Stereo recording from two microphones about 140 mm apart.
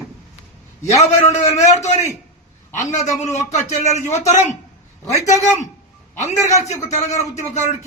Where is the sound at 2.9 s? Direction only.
20° left (ahead or behind).